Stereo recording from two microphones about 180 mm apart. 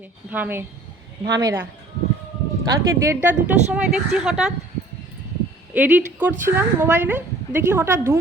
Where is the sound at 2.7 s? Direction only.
15° right (ahead or behind).